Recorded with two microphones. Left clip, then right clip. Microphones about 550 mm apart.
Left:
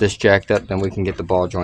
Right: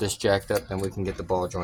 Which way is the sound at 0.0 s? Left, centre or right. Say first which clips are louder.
Left 9 dB; centre.